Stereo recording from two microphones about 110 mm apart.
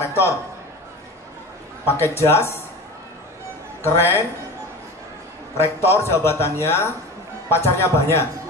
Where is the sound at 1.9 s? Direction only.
20° left (ahead or behind).